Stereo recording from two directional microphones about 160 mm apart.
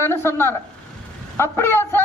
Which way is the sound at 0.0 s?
15° left (ahead or behind).